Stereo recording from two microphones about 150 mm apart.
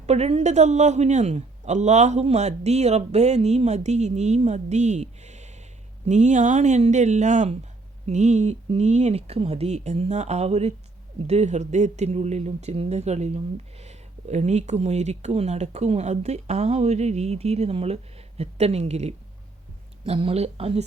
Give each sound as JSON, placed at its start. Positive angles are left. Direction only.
{"t": 0.0, "sound": "a man's voice", "side_deg": -45}